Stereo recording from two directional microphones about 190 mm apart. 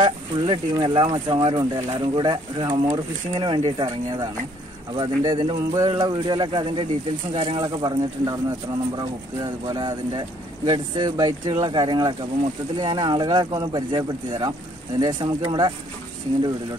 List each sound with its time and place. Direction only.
0.0 s speech: 25° right (ahead or behind)